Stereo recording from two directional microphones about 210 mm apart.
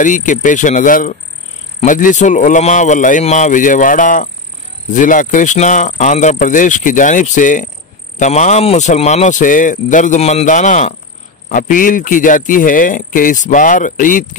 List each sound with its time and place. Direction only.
0.0 s speech: 40° left (ahead or behind)